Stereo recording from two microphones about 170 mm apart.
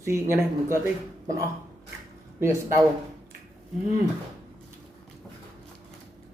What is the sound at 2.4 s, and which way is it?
Speech, 15° right (ahead or behind).